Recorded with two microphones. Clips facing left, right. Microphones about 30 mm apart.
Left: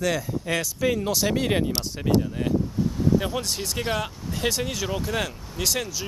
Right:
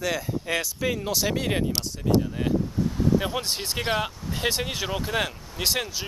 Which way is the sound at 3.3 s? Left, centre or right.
Centre.